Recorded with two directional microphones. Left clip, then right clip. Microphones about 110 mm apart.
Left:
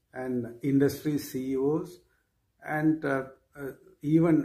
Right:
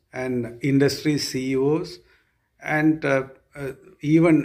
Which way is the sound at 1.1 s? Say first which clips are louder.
Right 7 dB; 90° left.